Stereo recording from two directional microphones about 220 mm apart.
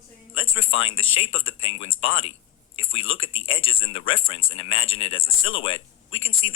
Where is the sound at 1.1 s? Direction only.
25° left (ahead or behind).